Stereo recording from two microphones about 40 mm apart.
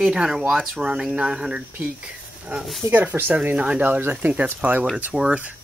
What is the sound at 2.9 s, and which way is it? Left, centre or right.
Speech, right.